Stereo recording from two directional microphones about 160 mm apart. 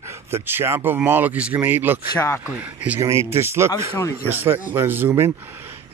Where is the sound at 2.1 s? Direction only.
15° left (ahead or behind).